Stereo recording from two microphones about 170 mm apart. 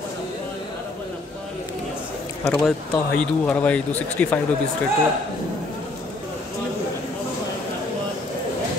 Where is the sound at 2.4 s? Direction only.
5° left (ahead or behind).